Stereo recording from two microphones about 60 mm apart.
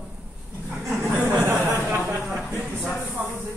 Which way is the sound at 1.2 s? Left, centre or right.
Right.